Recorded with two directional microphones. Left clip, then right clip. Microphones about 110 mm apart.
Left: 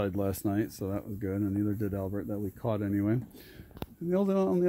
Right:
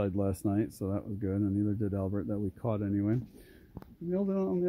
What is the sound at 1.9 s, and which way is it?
Speech, 30° right (ahead or behind).